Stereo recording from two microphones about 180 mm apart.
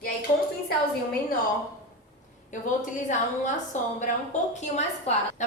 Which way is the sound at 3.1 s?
45° left (ahead or behind).